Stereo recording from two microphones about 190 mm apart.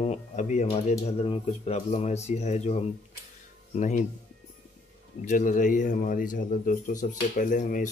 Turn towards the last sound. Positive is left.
turn(degrees=40)  # may be behind; listen again after turning